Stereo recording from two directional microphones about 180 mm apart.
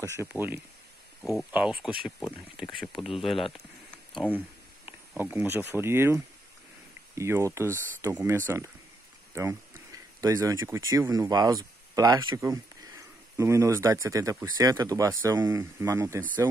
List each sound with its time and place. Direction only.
0.0 s speech: 15° right (ahead or behind)
3.5 s a sound: 5° left (ahead or behind)
4.8 s speech: 10° right (ahead or behind)